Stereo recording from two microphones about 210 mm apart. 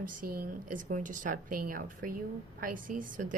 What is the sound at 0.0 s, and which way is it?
A woman's voice, 45° right (ahead or behind).